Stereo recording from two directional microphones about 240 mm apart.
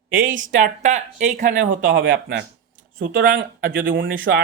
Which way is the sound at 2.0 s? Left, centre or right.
Right.